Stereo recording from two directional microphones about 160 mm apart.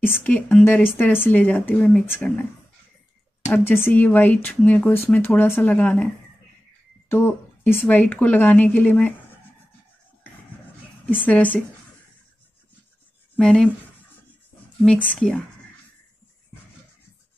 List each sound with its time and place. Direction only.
0.0 s a woman's voice: 10° left (ahead or behind)
3.5 s a woman's voice: 15° left (ahead or behind)
7.1 s a woman's voice: 15° left (ahead or behind)
11.1 s a woman's voice: 10° left (ahead or behind)
13.4 s speech: 5° left (ahead or behind)
14.9 s speech: 5° left (ahead or behind)